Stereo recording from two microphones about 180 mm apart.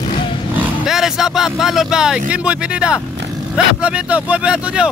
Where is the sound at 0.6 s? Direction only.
Centre (ahead or behind).